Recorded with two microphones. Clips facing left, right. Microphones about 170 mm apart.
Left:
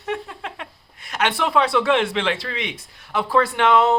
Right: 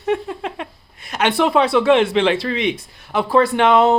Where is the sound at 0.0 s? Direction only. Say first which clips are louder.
Right 7 dB; 25° right (ahead or behind).